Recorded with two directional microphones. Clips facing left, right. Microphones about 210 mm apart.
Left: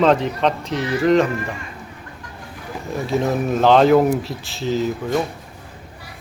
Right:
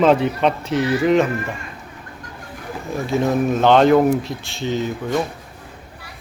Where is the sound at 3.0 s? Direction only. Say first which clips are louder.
Right 2 dB; centre (ahead or behind).